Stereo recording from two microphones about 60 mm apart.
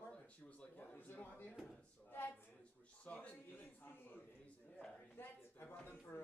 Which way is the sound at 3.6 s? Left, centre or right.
Left.